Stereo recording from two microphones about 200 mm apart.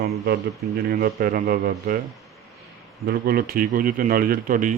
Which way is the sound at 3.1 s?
50° right (ahead or behind).